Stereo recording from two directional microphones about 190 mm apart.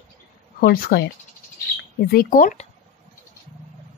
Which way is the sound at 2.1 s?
50° left (ahead or behind).